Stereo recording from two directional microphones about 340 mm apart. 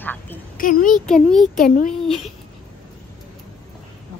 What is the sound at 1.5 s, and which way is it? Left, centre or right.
Speech, left.